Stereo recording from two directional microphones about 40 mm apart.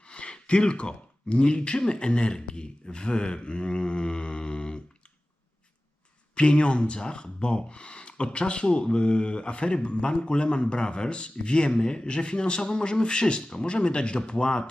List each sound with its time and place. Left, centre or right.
0.1 s gasp: left
1.9 s speech: left
6.3 s speech: left